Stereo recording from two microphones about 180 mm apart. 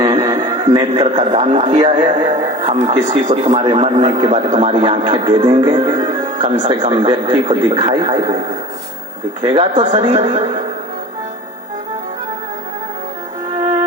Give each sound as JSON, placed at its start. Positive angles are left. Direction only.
{"t": 0.0, "sound": "a man's voice", "side_deg": -20}
{"t": 1.7, "sound": "a man's voice", "side_deg": -25}
{"t": 9.4, "sound": "a man's voice", "side_deg": -25}
{"t": 10.1, "sound": "speech", "side_deg": -40}